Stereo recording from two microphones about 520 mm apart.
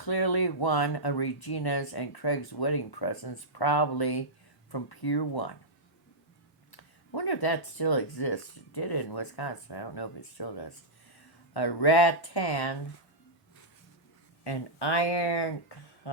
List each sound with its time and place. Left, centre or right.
0.0 s speech: left
6.7 s speech: left
14.4 s speech: left